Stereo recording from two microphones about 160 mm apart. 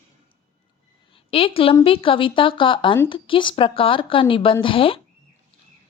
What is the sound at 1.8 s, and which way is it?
Speech, 35° left (ahead or behind).